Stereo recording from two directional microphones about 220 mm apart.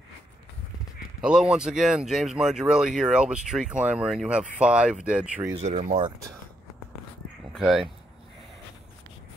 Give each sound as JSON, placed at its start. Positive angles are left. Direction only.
{"t": 1.2, "sound": "speech", "side_deg": -5}
{"t": 5.6, "sound": "speech", "side_deg": -30}
{"t": 7.5, "sound": "speech", "side_deg": 0}